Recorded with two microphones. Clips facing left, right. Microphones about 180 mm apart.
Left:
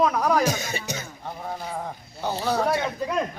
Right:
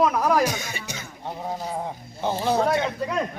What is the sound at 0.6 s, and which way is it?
Speech, 40° left (ahead or behind).